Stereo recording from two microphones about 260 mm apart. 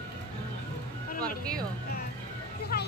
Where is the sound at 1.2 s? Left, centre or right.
Centre.